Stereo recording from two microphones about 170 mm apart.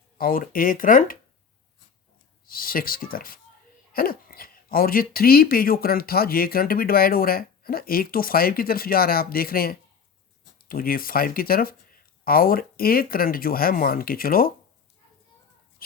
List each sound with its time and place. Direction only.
0.2 s speech: 55° left (ahead or behind)
2.5 s speech: 60° left (ahead or behind)